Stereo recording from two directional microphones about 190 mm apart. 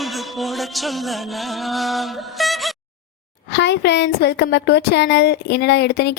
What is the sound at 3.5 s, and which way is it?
A woman's voice, 65° left (ahead or behind).